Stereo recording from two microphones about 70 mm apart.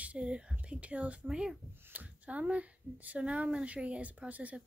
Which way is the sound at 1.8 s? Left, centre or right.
Right.